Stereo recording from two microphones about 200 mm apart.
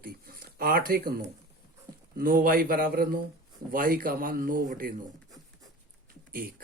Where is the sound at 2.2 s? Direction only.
45° right (ahead or behind).